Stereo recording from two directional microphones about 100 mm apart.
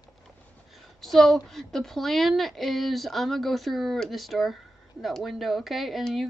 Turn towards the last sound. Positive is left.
turn(degrees=0)  # may be behind; listen again after turning